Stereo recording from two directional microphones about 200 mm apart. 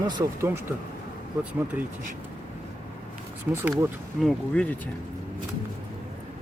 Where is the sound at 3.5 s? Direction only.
10° right (ahead or behind).